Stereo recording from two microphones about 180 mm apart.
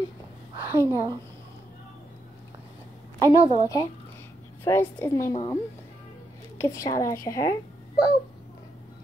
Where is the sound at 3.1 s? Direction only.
25° right (ahead or behind).